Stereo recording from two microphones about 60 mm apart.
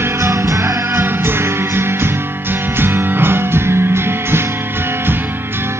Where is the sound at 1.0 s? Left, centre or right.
Right.